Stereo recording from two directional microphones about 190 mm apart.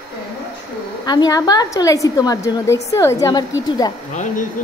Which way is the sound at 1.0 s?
20° left (ahead or behind).